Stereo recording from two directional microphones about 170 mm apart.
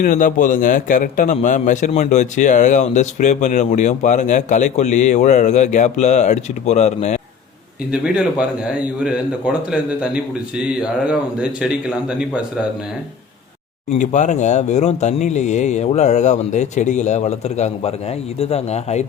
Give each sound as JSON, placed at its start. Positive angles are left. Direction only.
{"t": 0.0, "sound": "speech", "side_deg": 55}
{"t": 7.9, "sound": "a man's voice", "side_deg": -5}
{"t": 14.0, "sound": "a man's voice", "side_deg": 45}